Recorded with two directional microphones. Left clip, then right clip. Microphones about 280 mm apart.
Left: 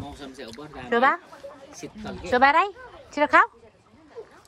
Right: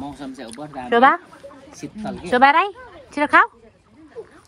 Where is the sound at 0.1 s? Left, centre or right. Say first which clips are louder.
Right 5 dB; centre.